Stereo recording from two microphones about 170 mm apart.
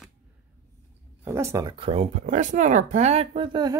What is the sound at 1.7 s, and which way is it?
Speech, 35° right (ahead or behind).